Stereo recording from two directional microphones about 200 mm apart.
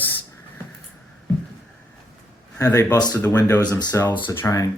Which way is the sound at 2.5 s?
15° left (ahead or behind).